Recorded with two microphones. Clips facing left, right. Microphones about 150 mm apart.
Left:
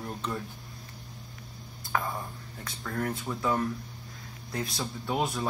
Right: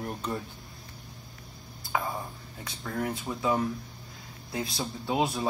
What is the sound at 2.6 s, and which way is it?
Speech, 10° right (ahead or behind).